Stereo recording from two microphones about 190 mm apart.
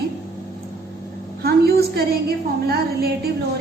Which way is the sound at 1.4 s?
55° right (ahead or behind).